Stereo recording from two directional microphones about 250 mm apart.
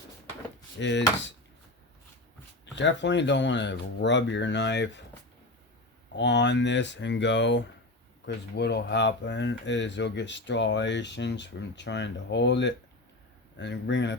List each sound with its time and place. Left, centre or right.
0.8 s speech: left
2.7 s speech: left
6.1 s speech: left